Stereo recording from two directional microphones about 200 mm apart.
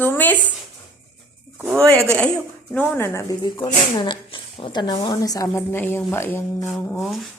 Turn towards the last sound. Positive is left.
turn(degrees=0)  # may be behind; listen again after turning